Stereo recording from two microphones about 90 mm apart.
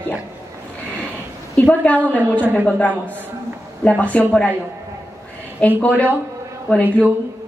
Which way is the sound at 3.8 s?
15° left (ahead or behind).